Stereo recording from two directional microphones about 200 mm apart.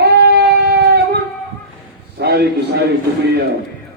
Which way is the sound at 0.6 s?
50° right (ahead or behind).